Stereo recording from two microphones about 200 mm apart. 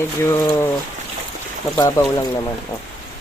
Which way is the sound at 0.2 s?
10° left (ahead or behind).